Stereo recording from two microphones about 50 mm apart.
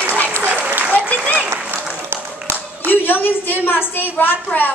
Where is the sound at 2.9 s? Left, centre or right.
Left.